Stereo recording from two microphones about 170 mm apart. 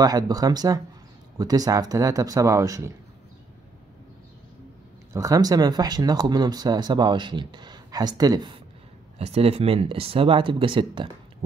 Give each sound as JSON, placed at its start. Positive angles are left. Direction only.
{"t": 0.0, "sound": "speech", "side_deg": -20}
{"t": 5.1, "sound": "speech", "side_deg": -20}
{"t": 9.2, "sound": "speech", "side_deg": -35}